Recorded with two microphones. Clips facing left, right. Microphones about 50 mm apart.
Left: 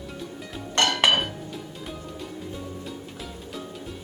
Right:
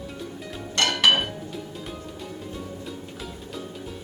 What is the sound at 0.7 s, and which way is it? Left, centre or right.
Dishes, left.